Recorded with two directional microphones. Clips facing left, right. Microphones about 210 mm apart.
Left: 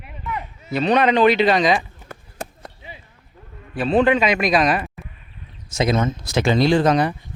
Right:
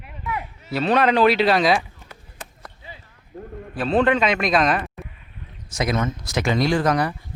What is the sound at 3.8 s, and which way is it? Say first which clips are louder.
A man's voice: left 2 dB; centre (ahead or behind).